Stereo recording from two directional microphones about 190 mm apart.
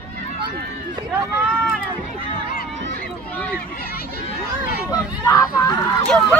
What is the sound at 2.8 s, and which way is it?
Run, 55° right (ahead or behind).